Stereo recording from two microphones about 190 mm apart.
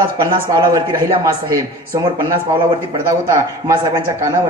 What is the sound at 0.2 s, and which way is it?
Speech, 20° right (ahead or behind).